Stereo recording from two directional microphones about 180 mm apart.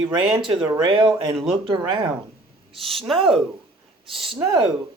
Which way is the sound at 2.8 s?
Centre (ahead or behind).